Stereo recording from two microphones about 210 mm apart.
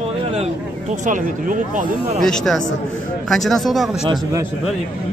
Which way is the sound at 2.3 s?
5° left (ahead or behind).